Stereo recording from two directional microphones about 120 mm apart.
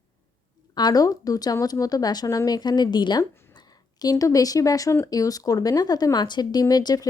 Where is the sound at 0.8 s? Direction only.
30° left (ahead or behind).